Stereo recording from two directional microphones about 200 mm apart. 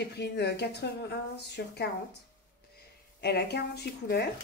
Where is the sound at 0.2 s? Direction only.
55° left (ahead or behind).